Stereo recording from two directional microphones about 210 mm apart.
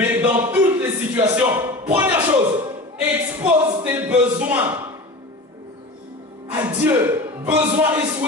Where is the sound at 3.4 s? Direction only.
10° right (ahead or behind).